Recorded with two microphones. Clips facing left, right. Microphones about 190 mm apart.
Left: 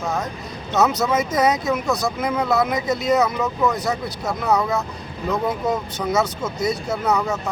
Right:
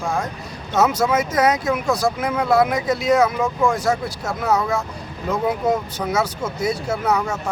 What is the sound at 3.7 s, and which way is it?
Speech, 25° right (ahead or behind).